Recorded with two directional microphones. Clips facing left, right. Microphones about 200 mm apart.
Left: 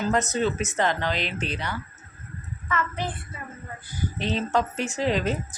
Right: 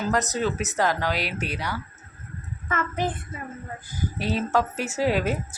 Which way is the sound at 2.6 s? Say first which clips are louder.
Right 2 dB; 45° right (ahead or behind).